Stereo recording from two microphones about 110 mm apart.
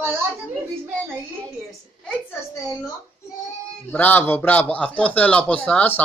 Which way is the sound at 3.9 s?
15° left (ahead or behind).